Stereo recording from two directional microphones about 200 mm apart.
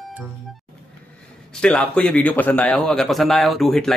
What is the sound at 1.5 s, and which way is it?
A man's voice, 5° left (ahead or behind).